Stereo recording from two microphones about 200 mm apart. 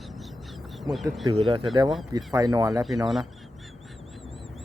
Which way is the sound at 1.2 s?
25° right (ahead or behind).